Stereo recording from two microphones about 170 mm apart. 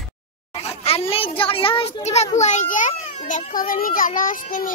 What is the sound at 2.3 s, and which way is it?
A child's voice, 45° left (ahead or behind).